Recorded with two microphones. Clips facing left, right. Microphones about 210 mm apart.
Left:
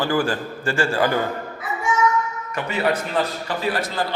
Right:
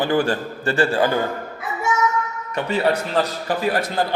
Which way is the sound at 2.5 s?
30° right (ahead or behind).